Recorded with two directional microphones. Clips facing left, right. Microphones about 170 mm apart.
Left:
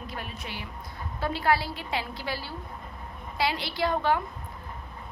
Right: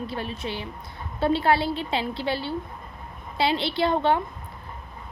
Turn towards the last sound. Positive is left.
turn(degrees=-25)  # may be behind; listen again after turning